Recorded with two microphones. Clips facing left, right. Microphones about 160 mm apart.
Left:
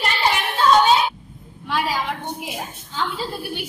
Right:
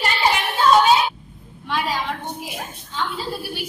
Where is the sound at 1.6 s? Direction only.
10° left (ahead or behind).